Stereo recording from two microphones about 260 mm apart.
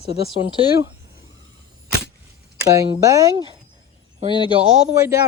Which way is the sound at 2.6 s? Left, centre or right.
Centre.